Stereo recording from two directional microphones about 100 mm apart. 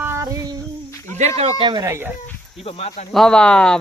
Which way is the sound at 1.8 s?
25° right (ahead or behind).